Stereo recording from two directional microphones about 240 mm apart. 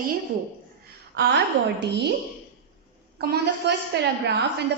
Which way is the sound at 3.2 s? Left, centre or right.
Right.